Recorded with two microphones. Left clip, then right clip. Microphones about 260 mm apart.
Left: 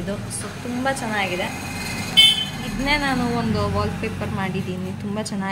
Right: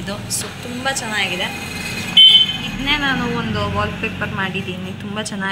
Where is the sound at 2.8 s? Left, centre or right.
Centre.